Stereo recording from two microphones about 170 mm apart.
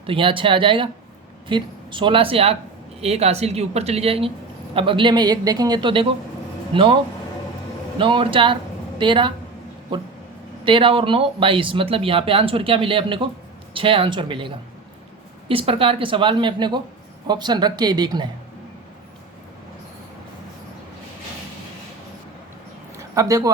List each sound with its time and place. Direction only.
0.0 s speech: 30° right (ahead or behind)
10.6 s speech: 30° right (ahead or behind)
23.0 s a sound: 20° right (ahead or behind)